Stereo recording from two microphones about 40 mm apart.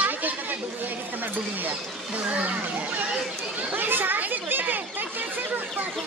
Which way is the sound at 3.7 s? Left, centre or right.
Right.